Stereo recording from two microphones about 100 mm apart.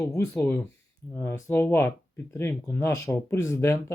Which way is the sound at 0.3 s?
20° left (ahead or behind).